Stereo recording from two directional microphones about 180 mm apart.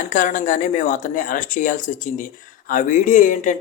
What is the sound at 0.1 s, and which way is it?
Speech, 45° left (ahead or behind).